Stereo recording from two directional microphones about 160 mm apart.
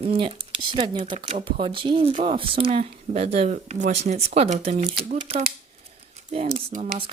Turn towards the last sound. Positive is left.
turn(degrees=-40)  # may be behind; listen again after turning